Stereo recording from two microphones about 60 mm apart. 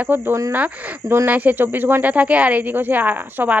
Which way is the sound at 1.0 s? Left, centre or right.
Right.